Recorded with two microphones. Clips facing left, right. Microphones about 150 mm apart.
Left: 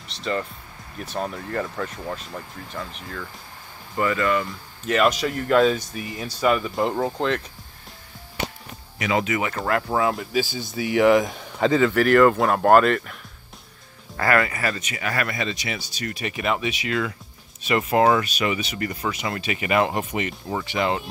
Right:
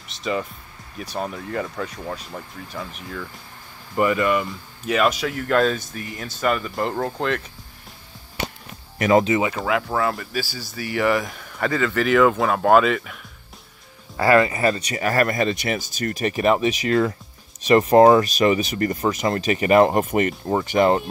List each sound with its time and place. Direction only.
0.2 s speech: 10° right (ahead or behind)
3.9 s speech: 15° right (ahead or behind); by 7.4 s centre (ahead or behind)
8.9 s music: 50° right (ahead or behind)
9.2 s speech: 25° right (ahead or behind)
9.6 s speech: centre (ahead or behind)
10.4 s speech: 20° left (ahead or behind); by 13.2 s centre (ahead or behind)
14.1 s speech: 20° right (ahead or behind); by 21.0 s 45° right (ahead or behind)